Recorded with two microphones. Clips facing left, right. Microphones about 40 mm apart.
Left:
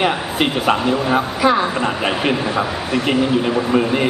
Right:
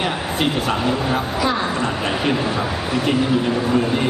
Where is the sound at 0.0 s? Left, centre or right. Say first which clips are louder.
Left 3 dB; left.